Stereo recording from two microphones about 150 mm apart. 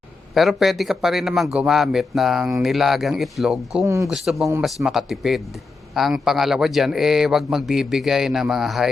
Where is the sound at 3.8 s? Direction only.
20° right (ahead or behind).